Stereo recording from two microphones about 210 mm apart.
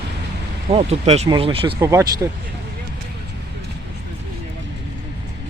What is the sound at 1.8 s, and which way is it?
Speech, 15° right (ahead or behind).